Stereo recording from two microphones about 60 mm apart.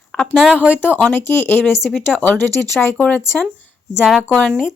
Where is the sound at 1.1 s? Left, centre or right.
Left.